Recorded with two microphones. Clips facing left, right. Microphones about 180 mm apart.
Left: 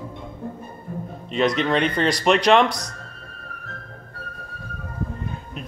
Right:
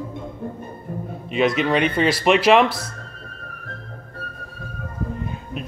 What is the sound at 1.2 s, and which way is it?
Speech, centre (ahead or behind).